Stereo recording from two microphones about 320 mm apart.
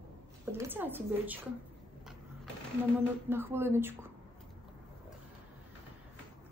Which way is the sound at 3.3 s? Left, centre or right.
Centre.